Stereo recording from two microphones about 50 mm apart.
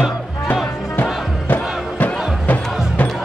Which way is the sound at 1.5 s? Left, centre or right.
Left.